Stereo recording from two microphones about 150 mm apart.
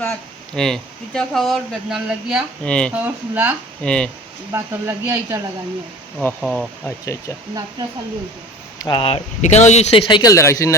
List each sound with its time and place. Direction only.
0.5 s speech: 5° left (ahead or behind)
2.9 s speech: 10° right (ahead or behind)
3.8 s speech: 5° left (ahead or behind)
4.5 s speech: 20° right (ahead or behind)
6.4 s speech: 5° right (ahead or behind)
6.8 s speech: 20° left (ahead or behind)
8.8 s speech: 30° left (ahead or behind)
9.4 s speech: 50° left (ahead or behind)
10.1 s speech: 25° left (ahead or behind)